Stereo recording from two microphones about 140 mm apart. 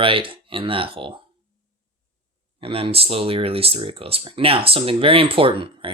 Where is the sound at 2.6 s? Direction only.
40° right (ahead or behind).